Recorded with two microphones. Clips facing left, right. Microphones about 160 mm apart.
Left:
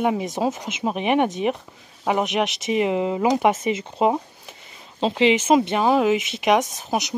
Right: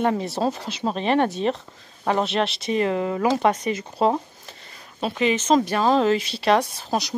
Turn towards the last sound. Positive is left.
turn(degrees=20)  # may be behind; listen again after turning